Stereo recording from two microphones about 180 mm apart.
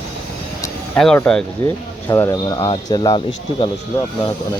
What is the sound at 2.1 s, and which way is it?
Speech, 20° left (ahead or behind).